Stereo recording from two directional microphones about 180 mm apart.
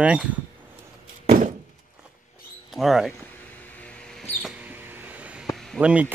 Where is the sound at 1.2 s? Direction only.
45° right (ahead or behind).